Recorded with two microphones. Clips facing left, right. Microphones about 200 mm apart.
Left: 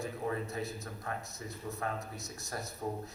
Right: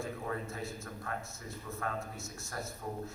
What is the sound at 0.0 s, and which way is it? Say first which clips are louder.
A man's voice: left 2 dB; 20° left (ahead or behind).